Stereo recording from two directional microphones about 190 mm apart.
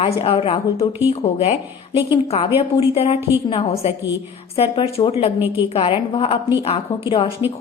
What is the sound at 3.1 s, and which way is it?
Speech, 10° right (ahead or behind).